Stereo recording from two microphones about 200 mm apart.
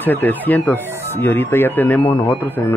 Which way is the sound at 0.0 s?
10° left (ahead or behind).